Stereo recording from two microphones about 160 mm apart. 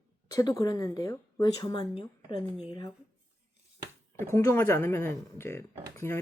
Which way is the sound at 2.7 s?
20° left (ahead or behind).